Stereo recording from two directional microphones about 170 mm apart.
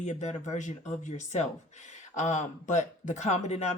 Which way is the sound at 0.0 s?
45° left (ahead or behind).